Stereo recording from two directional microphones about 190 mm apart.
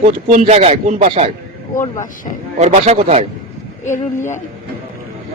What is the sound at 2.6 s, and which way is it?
Speech, 35° right (ahead or behind).